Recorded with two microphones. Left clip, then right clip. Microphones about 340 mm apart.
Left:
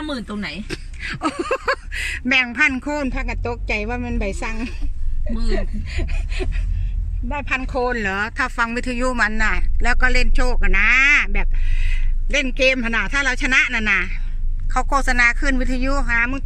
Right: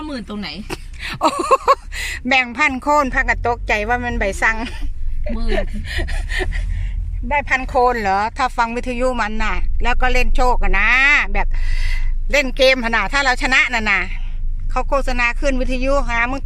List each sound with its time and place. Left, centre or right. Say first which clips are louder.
0.1 s speech: left 1 dB; centre; by 4.5 s right
7.3 s speech: right 6 dB; right
7.8 s speech: right 7 dB; centre